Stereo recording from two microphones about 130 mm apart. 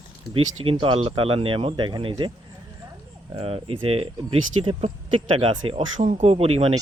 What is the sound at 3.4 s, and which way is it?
Speech, 45° right (ahead or behind).